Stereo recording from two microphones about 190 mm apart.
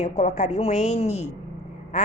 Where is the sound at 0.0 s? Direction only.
35° left (ahead or behind).